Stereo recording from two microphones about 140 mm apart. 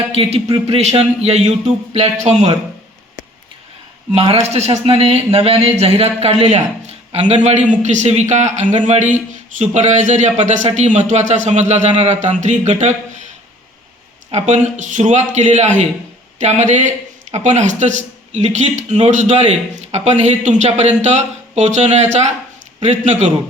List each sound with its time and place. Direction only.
0.1 s speech: 45° right (ahead or behind)
4.1 s speech: 45° right (ahead or behind)
14.3 s speech: 55° right (ahead or behind)